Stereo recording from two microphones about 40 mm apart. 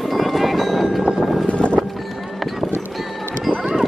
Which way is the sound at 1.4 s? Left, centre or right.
Left.